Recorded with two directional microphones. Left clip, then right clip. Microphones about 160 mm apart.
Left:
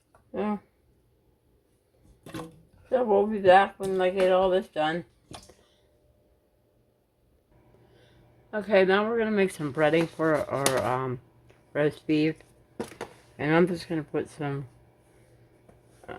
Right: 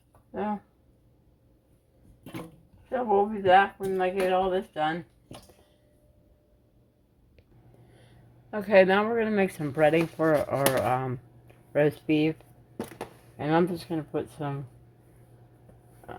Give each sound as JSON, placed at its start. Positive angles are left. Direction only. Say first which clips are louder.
{"t": 0.3, "sound": "a sound", "louder": "left 1 dB", "side_deg": 35}
{"t": 2.9, "sound": "speech", "louder": "left 2 dB", "side_deg": 40}
{"t": 8.4, "sound": "speech", "louder": "right 2 dB", "side_deg": -20}
{"t": 10.3, "sound": "speech", "louder": "right 1 dB", "side_deg": -10}
{"t": 13.3, "sound": "speech", "louder": "left 2 dB", "side_deg": 20}